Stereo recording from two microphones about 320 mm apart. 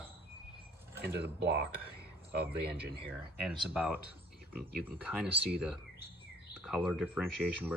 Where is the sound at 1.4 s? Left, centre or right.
Right.